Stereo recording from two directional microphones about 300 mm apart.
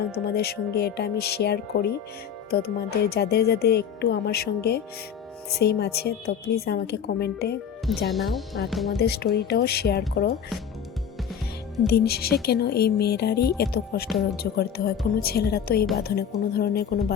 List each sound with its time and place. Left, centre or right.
0.1 s speech: left
8.0 s speech: centre
9.0 s speech: left
11.9 s speech: left